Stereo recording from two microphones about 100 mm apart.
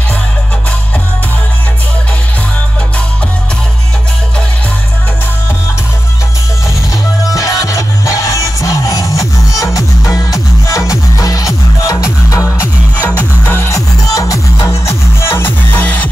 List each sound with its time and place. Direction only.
7.3 s music: 35° left (ahead or behind)
13.7 s music: 35° left (ahead or behind); by 16.1 s 15° left (ahead or behind)